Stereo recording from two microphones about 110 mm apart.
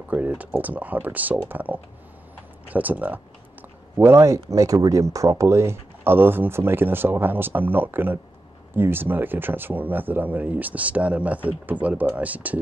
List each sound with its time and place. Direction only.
0.1 s speech: 15° right (ahead or behind)